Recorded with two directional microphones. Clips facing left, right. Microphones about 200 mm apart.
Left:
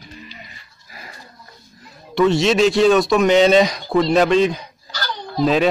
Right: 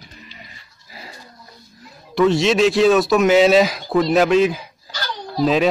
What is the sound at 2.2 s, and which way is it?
A man's voice, centre (ahead or behind).